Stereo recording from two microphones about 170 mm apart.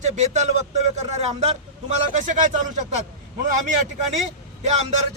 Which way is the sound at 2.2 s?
45° right (ahead or behind).